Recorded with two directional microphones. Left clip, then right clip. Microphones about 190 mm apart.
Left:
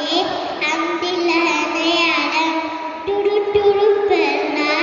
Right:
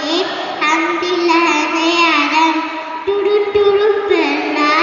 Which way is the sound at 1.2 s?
65° left (ahead or behind).